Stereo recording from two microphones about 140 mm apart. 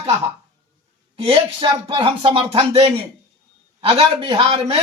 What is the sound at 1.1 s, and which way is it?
A man's voice, 45° right (ahead or behind).